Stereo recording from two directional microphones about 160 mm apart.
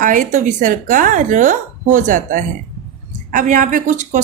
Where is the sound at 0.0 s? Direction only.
55° right (ahead or behind).